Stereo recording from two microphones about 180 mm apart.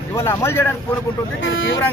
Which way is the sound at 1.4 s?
90° left.